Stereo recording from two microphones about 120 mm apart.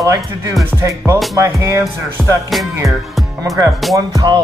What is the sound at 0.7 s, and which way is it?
Music, 25° right (ahead or behind).